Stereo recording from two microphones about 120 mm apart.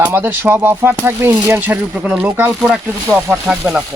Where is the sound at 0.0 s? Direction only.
15° right (ahead or behind).